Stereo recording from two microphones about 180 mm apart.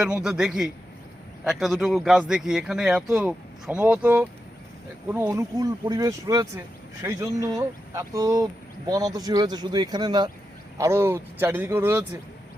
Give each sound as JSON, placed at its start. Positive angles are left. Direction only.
{"t": 0.0, "sound": "speech", "side_deg": -5}